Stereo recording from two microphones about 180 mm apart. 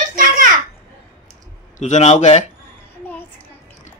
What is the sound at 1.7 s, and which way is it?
Speech, 40° left (ahead or behind).